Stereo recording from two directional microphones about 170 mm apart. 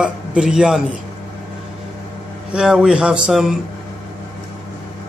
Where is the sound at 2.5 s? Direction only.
5° right (ahead or behind).